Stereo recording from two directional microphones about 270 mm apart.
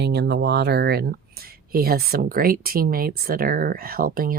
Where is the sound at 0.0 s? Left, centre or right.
Right.